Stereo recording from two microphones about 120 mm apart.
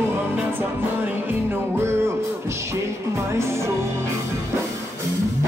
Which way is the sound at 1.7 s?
20° right (ahead or behind).